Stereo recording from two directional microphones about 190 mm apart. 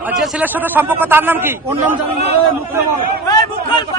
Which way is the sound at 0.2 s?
10° right (ahead or behind).